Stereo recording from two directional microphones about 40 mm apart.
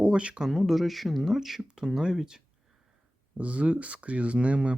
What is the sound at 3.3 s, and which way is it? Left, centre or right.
Speech, right.